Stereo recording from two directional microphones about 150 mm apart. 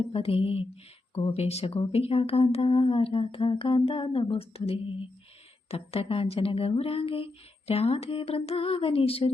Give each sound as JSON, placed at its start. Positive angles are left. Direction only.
{"t": 0.0, "sound": "speech", "side_deg": 40}